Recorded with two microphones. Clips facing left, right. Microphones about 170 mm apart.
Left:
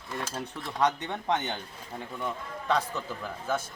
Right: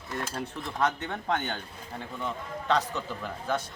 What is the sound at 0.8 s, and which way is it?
Speech, 20° left (ahead or behind).